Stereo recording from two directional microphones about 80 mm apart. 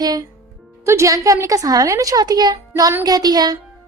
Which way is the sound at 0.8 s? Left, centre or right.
Right.